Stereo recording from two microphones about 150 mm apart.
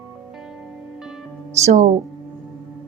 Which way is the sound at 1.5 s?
50° right (ahead or behind).